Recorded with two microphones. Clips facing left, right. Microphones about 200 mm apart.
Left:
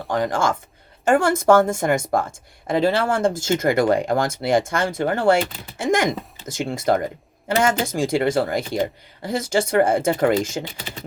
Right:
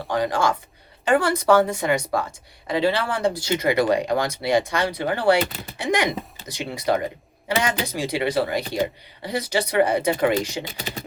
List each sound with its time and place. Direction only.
0.1 s speech: 50° left (ahead or behind)